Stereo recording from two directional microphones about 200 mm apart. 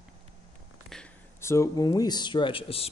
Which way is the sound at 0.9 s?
10° left (ahead or behind).